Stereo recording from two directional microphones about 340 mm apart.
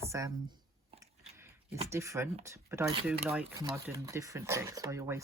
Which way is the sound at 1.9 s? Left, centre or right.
Centre.